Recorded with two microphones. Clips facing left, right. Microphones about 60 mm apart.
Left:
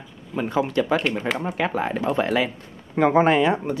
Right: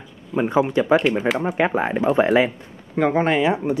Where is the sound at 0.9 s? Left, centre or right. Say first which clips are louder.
Right 5 dB; centre.